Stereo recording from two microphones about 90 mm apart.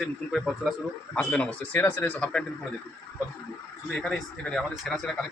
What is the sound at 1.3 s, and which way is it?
Speech, 20° left (ahead or behind).